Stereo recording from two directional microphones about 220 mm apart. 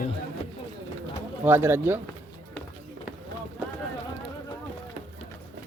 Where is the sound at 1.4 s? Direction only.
10° right (ahead or behind).